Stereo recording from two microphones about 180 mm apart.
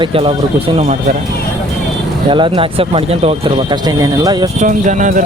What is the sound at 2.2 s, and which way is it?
Speech, 30° right (ahead or behind).